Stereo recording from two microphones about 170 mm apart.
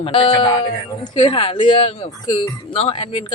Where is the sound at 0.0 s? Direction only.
30° left (ahead or behind).